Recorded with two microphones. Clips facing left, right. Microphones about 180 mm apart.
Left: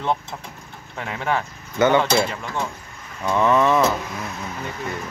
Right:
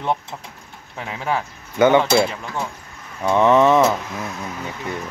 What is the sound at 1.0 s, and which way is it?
Speech, 10° right (ahead or behind).